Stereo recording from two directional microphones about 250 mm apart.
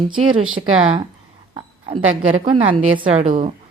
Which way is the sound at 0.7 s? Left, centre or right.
Right.